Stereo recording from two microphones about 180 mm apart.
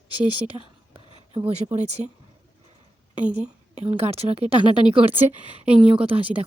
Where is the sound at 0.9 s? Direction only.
30° right (ahead or behind).